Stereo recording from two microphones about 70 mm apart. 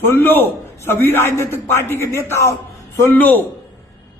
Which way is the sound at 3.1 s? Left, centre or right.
Left.